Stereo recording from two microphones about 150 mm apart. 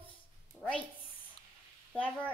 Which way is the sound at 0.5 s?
5° left (ahead or behind).